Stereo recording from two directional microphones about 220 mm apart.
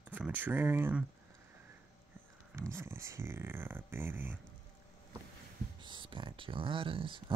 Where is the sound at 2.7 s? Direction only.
10° right (ahead or behind).